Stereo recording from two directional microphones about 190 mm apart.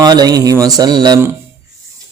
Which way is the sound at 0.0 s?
20° right (ahead or behind).